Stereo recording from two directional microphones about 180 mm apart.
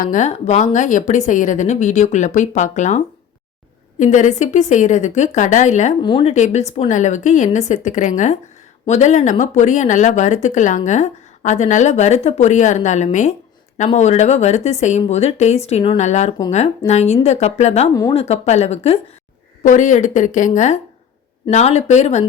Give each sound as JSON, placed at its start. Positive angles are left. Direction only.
{"t": 0.0, "sound": "a woman's voice", "side_deg": 45}
{"t": 6.0, "sound": "speech", "side_deg": 25}
{"t": 6.2, "sound": "a woman's voice", "side_deg": 40}